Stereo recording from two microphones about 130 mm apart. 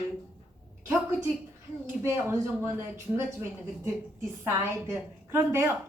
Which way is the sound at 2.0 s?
20° right (ahead or behind).